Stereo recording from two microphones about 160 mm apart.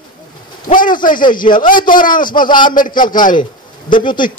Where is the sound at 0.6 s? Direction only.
60° left (ahead or behind).